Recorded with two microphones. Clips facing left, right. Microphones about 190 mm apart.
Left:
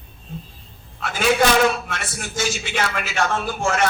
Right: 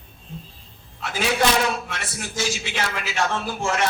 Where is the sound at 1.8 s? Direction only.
50° left (ahead or behind).